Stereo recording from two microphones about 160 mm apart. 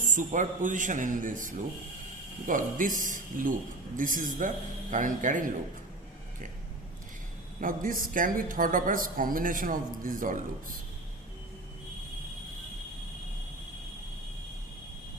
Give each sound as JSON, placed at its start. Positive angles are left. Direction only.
{"t": 0.0, "sound": "speech", "side_deg": -55}
{"t": 7.6, "sound": "speech", "side_deg": -60}